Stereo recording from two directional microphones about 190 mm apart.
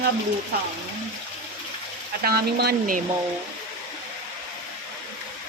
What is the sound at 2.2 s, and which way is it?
Speech, 55° right (ahead or behind).